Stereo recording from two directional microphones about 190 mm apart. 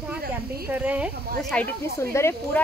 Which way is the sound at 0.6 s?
10° right (ahead or behind).